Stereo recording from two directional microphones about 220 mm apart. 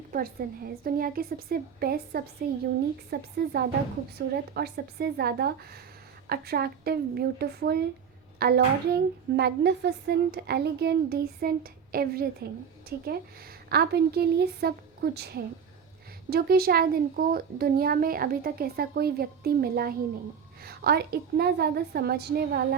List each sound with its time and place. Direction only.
0.1 s a child's voice: 40° right (ahead or behind)